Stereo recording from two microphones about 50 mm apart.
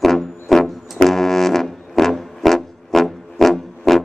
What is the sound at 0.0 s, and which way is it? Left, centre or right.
Music, centre.